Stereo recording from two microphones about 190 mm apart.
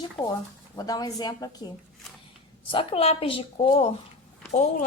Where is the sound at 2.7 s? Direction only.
30° left (ahead or behind).